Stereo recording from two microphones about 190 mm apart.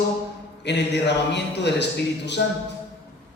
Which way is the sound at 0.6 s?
65° left (ahead or behind).